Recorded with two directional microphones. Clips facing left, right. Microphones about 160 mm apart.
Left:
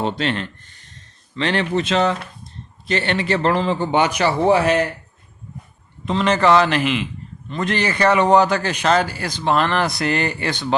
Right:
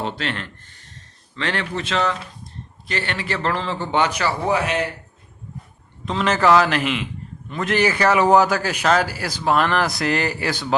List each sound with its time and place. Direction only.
0.0 s a man's voice: 20° left (ahead or behind)
6.1 s a man's voice: centre (ahead or behind)